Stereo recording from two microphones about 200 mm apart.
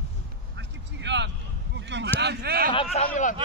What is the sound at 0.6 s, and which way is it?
Vehicle, 60° right (ahead or behind).